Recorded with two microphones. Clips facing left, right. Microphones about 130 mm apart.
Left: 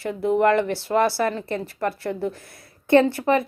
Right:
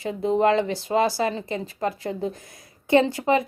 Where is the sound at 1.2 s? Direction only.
20° right (ahead or behind).